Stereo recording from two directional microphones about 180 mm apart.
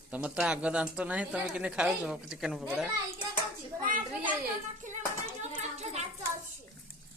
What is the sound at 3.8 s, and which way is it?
Speech, 50° right (ahead or behind).